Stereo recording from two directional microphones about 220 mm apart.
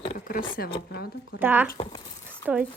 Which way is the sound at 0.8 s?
50° left (ahead or behind).